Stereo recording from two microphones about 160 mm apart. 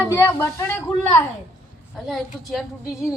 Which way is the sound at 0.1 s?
15° left (ahead or behind).